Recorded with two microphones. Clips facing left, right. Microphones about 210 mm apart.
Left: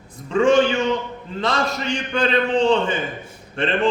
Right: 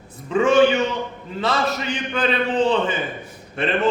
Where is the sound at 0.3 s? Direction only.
5° right (ahead or behind).